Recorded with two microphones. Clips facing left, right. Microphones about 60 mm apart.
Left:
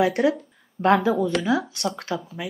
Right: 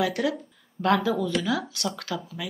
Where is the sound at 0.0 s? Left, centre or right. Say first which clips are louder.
Left 5 dB; left.